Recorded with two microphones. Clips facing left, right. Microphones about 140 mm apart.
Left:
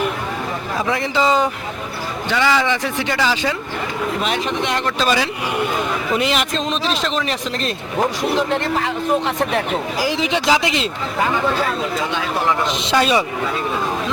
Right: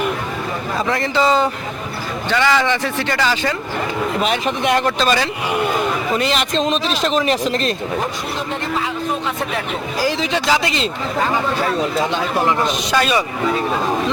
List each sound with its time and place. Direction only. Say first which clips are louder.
1.1 s a man's voice: right 1 dB; 10° left (ahead or behind)
4.2 s speech: right 2 dB; 5° right (ahead or behind)
4.9 s a man's voice: right 1 dB; 10° left (ahead or behind)
6.5 s speech: right 3 dB; centre (ahead or behind)
8.4 s speech: left 1 dB; 65° left (ahead or behind)
10.0 s a man's voice: right 2 dB; 15° left (ahead or behind)
12.6 s a man's voice: even; 25° left (ahead or behind)